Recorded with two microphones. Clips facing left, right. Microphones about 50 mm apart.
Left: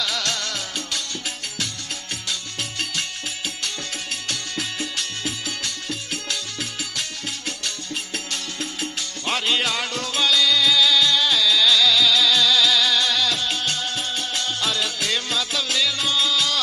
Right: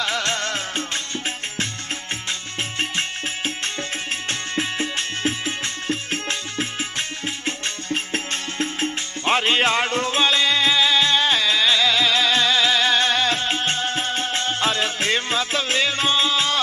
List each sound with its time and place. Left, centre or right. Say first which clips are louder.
0.0 s music: right 3 dB; right
2.8 s music: right 4 dB; right